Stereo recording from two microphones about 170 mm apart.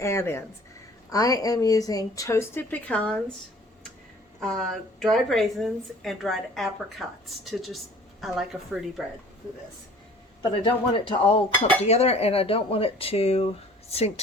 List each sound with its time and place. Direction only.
0.0 s speech: 15° left (ahead or behind)
4.4 s a woman's voice: centre (ahead or behind)
10.5 s speech: 30° left (ahead or behind)